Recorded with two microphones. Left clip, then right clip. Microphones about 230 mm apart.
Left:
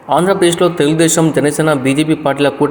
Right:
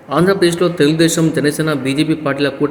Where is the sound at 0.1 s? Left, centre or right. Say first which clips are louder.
Left 2 dB; centre.